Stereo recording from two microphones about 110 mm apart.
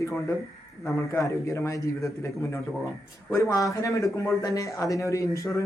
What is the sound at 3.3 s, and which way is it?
A man's voice, 30° left (ahead or behind).